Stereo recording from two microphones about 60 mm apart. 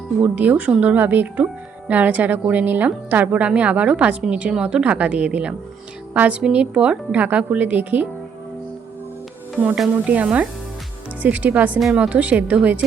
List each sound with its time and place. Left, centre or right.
0.2 s a woman's voice: right
10.1 s a woman's voice: right